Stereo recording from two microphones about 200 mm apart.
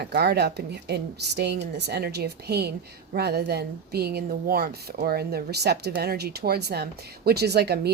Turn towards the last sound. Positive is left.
turn(degrees=-55)  # may be behind; listen again after turning